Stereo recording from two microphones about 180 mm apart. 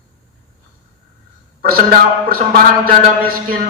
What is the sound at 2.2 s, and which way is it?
A man's voice, 55° right (ahead or behind).